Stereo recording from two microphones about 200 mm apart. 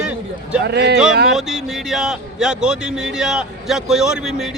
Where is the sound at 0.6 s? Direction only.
55° right (ahead or behind).